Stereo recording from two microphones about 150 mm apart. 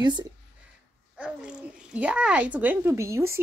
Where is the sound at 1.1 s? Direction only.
5° right (ahead or behind).